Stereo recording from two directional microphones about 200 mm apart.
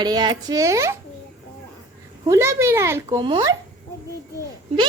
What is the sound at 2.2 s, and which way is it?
Speech, 15° right (ahead or behind).